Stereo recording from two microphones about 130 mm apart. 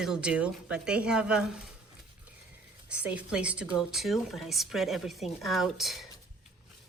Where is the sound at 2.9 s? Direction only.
10° right (ahead or behind).